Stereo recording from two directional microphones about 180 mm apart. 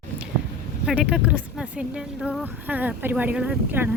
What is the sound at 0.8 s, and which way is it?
Speech, 5° right (ahead or behind).